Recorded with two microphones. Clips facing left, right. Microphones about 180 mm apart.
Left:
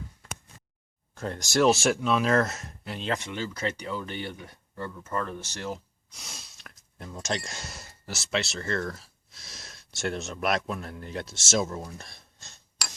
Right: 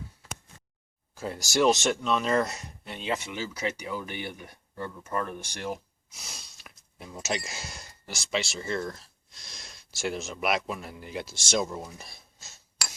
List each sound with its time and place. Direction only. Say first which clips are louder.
1.1 s speech: left 1 dB; 5° right (ahead or behind)
6.1 s speech: left 1 dB; centre (ahead or behind)